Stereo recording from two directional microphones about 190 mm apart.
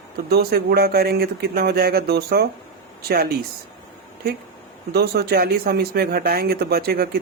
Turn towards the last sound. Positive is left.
turn(degrees=-55)  # may be behind; listen again after turning